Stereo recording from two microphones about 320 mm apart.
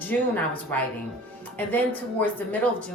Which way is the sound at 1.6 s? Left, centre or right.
Centre.